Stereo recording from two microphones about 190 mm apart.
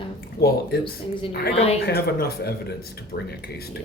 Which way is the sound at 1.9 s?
55° left (ahead or behind).